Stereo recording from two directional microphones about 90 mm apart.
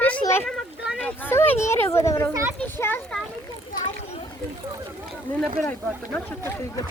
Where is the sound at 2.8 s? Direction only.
25° left (ahead or behind).